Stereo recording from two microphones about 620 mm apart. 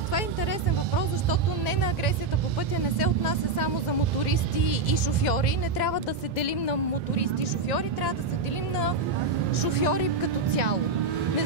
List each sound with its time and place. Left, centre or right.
6.4 s speech: left
9.6 s speech: left